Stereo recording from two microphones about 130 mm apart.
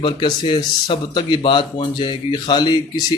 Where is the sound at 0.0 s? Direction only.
40° left (ahead or behind).